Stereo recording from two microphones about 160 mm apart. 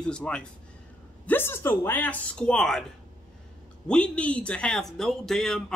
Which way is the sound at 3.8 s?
5° left (ahead or behind).